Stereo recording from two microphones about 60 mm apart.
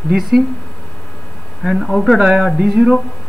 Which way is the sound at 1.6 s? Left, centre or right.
Centre.